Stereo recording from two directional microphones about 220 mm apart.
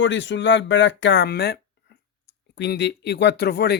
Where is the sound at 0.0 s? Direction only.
55° left (ahead or behind).